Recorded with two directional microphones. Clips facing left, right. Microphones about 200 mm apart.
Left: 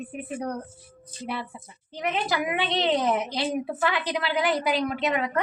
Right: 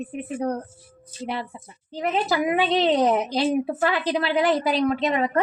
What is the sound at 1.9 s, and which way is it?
A woman's voice, 35° right (ahead or behind).